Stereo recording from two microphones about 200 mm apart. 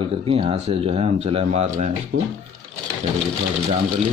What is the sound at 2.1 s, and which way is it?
Speech, 75° right (ahead or behind).